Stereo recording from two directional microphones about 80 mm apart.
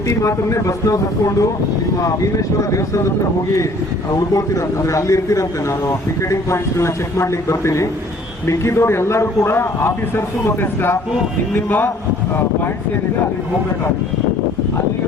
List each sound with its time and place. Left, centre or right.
0.1 s a man's voice: left
4.1 s a man's voice: left